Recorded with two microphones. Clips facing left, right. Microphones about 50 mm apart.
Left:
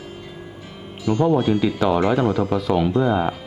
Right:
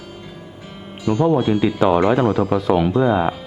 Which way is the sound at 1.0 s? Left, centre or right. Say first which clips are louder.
Right 1 dB; centre.